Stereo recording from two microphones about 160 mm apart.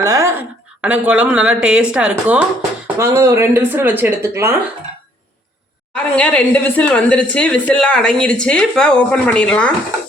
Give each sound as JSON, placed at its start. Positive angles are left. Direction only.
{"t": 0.0, "sound": "a sound", "side_deg": -20}
{"t": 0.8, "sound": "speech", "side_deg": -10}
{"t": 3.0, "sound": "speech", "side_deg": -20}
{"t": 5.9, "sound": "speech", "side_deg": 5}